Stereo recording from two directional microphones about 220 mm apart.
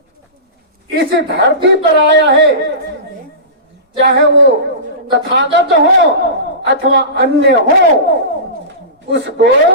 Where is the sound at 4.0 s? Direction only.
55° right (ahead or behind).